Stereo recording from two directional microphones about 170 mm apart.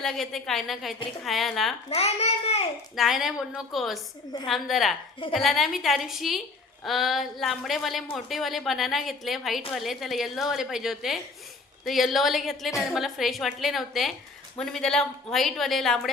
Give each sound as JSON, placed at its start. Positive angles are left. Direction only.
{"t": 0.0, "sound": "a woman's voice", "side_deg": 0}
{"t": 1.9, "sound": "a child's voice", "side_deg": 40}
{"t": 2.9, "sound": "a woman's voice", "side_deg": 0}